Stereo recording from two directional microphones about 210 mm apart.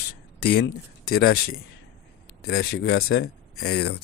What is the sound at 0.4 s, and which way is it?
Speech, 90° left.